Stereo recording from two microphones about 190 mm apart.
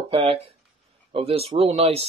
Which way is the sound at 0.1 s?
30° right (ahead or behind).